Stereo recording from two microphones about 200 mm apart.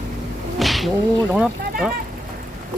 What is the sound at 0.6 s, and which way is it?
Whip, centre (ahead or behind).